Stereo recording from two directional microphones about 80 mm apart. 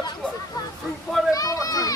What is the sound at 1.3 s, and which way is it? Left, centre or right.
Children playing, left.